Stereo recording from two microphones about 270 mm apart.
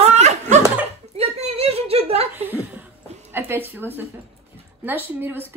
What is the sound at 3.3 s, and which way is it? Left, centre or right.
Speech, centre.